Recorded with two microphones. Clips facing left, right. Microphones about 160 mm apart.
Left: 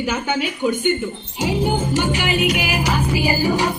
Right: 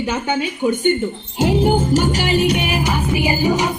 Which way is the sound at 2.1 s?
35° right (ahead or behind).